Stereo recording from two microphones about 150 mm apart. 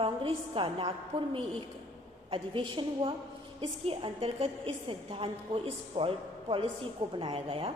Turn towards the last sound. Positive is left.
turn(degrees=-40)  # may be behind; listen again after turning